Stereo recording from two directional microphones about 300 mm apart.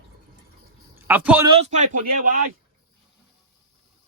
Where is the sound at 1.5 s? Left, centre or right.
Right.